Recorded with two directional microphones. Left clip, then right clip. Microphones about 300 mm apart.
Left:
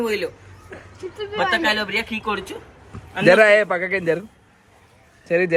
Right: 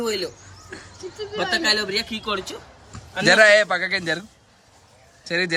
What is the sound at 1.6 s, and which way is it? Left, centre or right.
Speech, centre.